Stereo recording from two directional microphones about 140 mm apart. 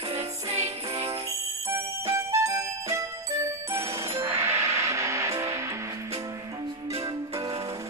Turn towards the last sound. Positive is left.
turn(degrees=-25)  # may be behind; listen again after turning